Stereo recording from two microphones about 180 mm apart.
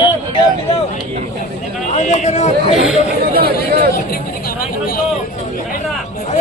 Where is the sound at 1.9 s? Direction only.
40° left (ahead or behind).